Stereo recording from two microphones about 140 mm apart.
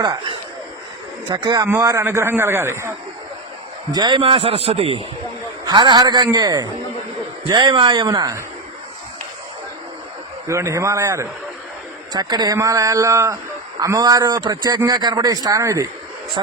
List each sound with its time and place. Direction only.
1.3 s speech: 30° right (ahead or behind)
3.9 s a man's voice: 35° right (ahead or behind)
10.4 s speech: 20° right (ahead or behind)